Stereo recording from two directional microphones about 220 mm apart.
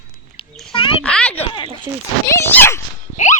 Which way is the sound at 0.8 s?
25° left (ahead or behind).